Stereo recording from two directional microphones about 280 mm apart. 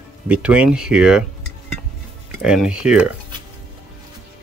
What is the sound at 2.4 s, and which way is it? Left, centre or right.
Speech, centre.